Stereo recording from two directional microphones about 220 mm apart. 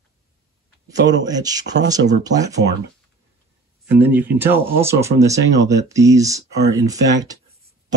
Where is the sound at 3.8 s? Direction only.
10° right (ahead or behind).